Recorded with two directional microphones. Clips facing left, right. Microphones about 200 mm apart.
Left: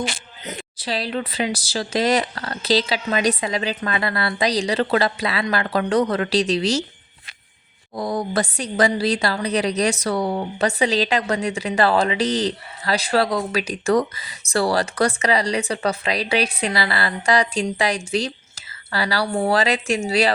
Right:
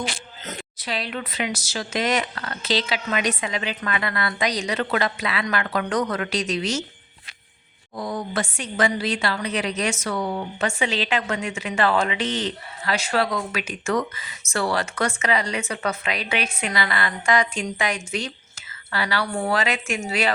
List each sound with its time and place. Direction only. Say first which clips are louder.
0.8 s a woman's voice: left 5 dB; 35° left (ahead or behind)
7.9 s a woman's voice: left 4 dB; 35° left (ahead or behind)